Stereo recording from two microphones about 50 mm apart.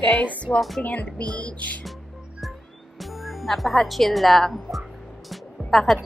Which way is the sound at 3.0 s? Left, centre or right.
Centre.